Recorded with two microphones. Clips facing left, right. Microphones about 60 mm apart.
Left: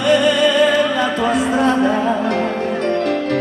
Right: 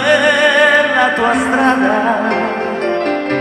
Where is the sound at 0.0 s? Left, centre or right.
Right.